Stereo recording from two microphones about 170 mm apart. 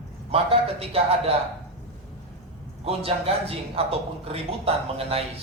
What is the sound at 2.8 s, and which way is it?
Speech, 35° right (ahead or behind).